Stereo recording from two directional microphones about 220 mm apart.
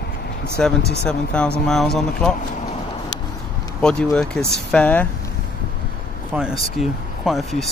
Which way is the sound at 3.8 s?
5° left (ahead or behind).